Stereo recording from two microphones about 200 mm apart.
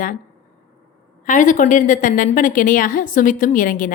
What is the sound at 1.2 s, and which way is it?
A woman's voice, 40° left (ahead or behind).